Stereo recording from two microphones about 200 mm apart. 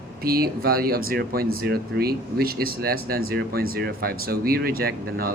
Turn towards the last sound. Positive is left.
turn(degrees=-50)  # may be behind; listen again after turning